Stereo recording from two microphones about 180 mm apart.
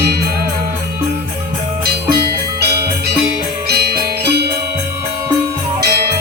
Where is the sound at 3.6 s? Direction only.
60° right (ahead or behind).